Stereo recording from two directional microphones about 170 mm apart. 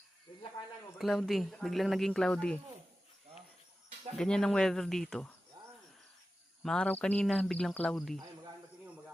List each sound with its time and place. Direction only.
0.9 s speech: centre (ahead or behind)
4.2 s speech: 5° left (ahead or behind)
6.6 s speech: 5° left (ahead or behind)